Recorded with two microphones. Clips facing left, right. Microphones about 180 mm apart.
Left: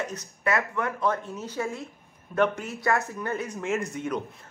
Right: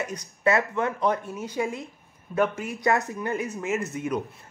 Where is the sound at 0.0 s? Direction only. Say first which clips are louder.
Right 1 dB; 15° right (ahead or behind).